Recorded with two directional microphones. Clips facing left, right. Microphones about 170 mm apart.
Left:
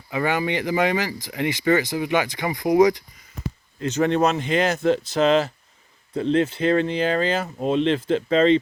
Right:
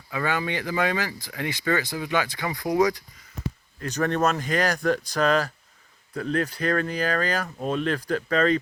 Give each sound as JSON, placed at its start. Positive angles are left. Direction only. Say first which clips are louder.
{"t": 0.1, "sound": "speech", "louder": "left 4 dB", "side_deg": 20}